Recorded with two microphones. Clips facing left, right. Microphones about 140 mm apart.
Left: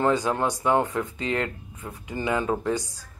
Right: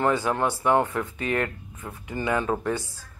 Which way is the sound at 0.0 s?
20° left (ahead or behind).